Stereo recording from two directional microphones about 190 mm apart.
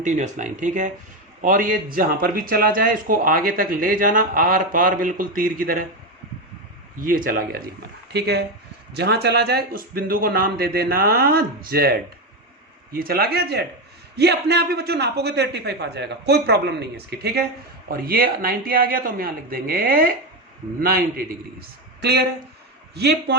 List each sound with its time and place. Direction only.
0.0 s a man's voice: 40° right (ahead or behind)
7.0 s a man's voice: 45° right (ahead or behind)
8.1 s a man's voice: 60° right (ahead or behind)